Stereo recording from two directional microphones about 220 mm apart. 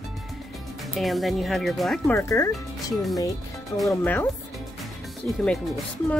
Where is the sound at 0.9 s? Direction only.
Centre (ahead or behind).